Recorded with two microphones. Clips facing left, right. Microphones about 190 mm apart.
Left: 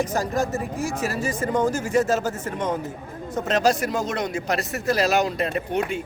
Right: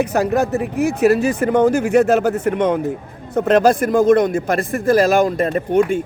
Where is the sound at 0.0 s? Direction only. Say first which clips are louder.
Right 7 dB; 65° right (ahead or behind); by 6.0 s 50° right (ahead or behind).